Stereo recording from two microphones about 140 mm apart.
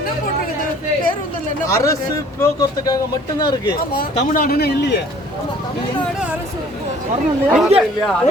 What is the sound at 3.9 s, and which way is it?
Speech, 90° left.